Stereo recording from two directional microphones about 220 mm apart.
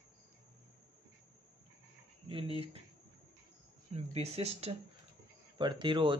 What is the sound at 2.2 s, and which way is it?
Speech, 25° right (ahead or behind).